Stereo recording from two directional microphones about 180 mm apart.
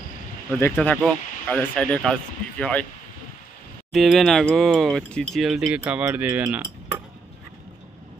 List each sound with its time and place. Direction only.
0.6 s speech: 10° left (ahead or behind)
3.9 s speech: centre (ahead or behind)